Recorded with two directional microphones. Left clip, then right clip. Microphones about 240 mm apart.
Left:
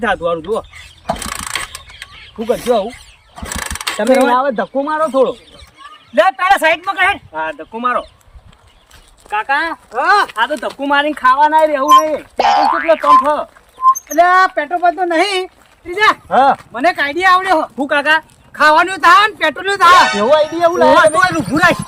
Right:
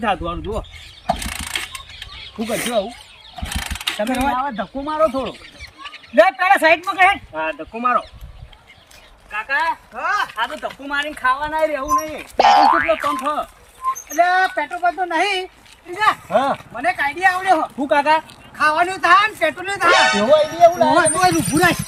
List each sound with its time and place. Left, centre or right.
0.0 s speech: centre
1.0 s mechanisms: centre
2.7 s speech: left
3.4 s pulleys: centre
4.5 s speech: left
6.1 s speech: centre
9.3 s speech: left
12.4 s boing: centre
14.1 s speech: left
19.9 s boing: centre
20.6 s speech: centre